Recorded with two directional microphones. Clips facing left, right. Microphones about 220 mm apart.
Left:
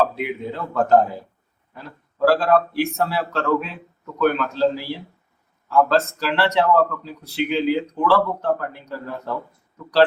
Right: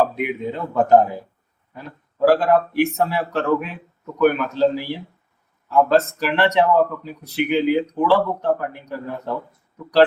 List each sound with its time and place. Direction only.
0.0 s speech: 15° right (ahead or behind)